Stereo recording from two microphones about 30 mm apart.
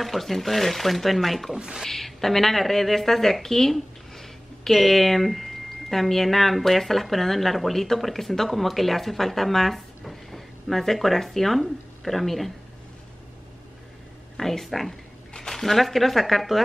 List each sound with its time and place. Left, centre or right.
0.0 s speech: centre
1.5 s speech: right
1.9 s a woman's voice: centre
14.3 s speech: centre